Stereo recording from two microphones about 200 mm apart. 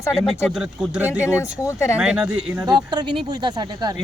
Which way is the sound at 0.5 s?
5° right (ahead or behind).